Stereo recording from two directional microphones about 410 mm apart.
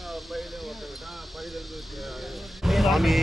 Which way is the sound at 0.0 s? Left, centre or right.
Centre.